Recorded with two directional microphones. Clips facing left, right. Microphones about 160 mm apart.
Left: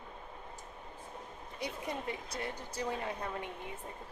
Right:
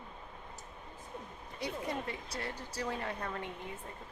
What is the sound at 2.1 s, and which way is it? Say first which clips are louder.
Speech: left 1 dB; 20° left (ahead or behind).